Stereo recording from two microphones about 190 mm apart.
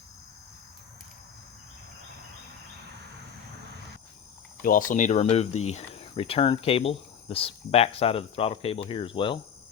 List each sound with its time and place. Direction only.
4.6 s speech: 45° left (ahead or behind); by 9.4 s 25° left (ahead or behind)